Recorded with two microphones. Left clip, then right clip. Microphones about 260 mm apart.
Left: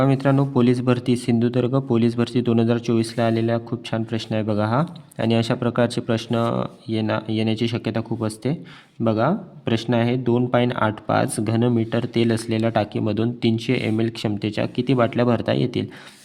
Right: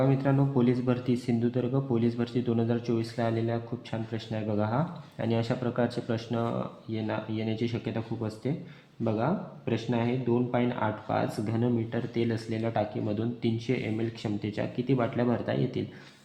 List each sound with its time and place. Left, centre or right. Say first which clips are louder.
0.0 s speech: left 7 dB; left